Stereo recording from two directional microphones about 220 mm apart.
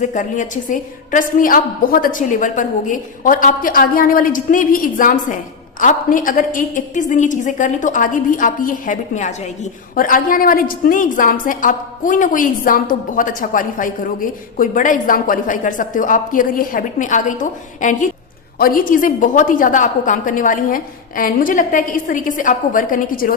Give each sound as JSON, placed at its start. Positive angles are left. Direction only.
{"t": 0.0, "sound": "a woman's voice", "side_deg": 35}